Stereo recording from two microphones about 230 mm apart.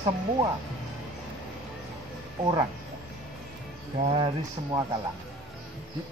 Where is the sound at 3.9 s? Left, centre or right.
Right.